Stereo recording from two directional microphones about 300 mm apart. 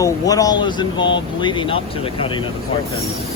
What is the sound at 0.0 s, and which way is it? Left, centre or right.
Speech, centre.